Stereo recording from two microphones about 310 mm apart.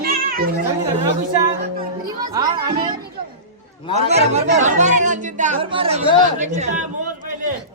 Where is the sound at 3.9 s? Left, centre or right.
Right.